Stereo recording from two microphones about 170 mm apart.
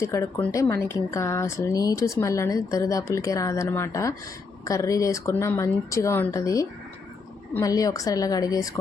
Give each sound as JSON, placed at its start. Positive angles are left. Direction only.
{"t": 0.0, "sound": "speech", "side_deg": 20}